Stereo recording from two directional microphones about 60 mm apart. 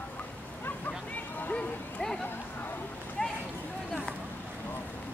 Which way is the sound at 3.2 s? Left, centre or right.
Centre.